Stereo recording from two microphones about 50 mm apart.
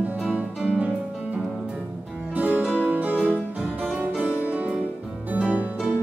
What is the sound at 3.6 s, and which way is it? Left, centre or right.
Harpsichord, right.